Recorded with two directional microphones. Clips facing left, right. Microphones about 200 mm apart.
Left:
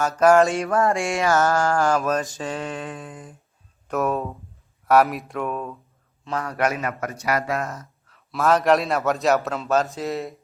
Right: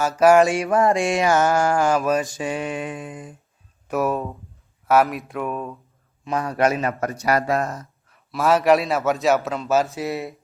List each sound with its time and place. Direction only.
0.0 s mantra: 5° right (ahead or behind)
3.8 s a man's voice: 5° right (ahead or behind)
6.2 s a man's voice: 20° right (ahead or behind); by 7.9 s 35° right (ahead or behind)
8.3 s a man's voice: 5° right (ahead or behind)